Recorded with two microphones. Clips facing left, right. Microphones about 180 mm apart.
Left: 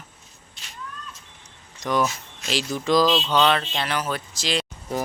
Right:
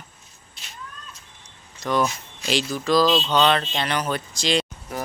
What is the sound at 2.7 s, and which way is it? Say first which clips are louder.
Speech: even; 20° left (ahead or behind).